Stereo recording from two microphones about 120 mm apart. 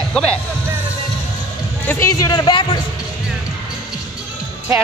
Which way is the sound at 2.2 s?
35° left (ahead or behind).